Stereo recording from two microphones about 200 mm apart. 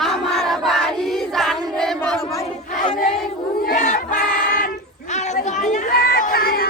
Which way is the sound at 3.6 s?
40° left (ahead or behind).